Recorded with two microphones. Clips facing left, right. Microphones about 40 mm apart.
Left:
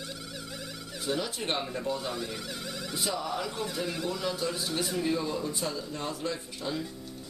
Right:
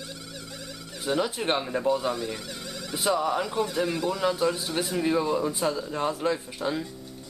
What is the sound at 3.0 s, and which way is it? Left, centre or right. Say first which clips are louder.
Speech: right 8 dB; centre.